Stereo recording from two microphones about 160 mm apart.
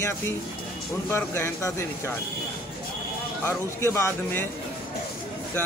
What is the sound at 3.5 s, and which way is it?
Speech, 15° left (ahead or behind).